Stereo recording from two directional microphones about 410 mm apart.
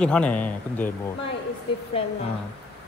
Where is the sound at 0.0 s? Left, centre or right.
Centre.